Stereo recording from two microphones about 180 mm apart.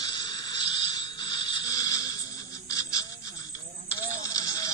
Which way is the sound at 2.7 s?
20° left (ahead or behind).